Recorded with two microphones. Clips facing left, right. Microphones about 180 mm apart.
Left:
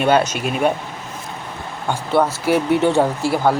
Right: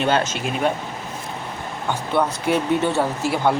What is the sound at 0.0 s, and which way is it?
Speech, 10° left (ahead or behind).